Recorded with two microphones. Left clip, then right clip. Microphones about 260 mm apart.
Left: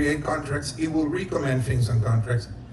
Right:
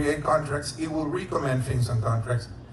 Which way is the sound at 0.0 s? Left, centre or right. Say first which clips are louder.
Right 1 dB; right.